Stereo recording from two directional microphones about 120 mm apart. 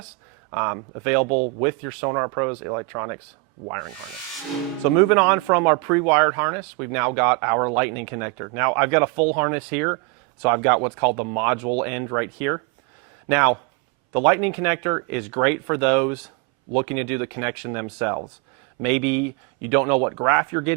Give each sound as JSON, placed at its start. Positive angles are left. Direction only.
{"t": 0.5, "sound": "speech", "side_deg": -15}
{"t": 5.1, "sound": "speech", "side_deg": -15}